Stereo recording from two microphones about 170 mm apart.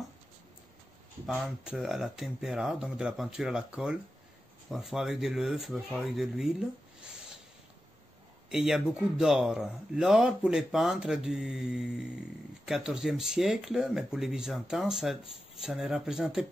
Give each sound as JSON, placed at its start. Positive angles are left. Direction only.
{"t": 1.2, "sound": "speech", "side_deg": 0}
{"t": 8.5, "sound": "speech", "side_deg": 0}